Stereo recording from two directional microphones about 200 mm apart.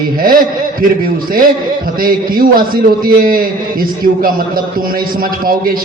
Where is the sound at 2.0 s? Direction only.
45° right (ahead or behind).